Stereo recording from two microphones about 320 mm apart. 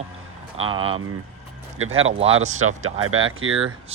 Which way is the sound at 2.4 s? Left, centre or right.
Right.